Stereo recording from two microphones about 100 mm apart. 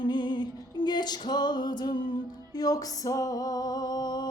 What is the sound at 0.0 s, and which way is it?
Music, 50° left (ahead or behind).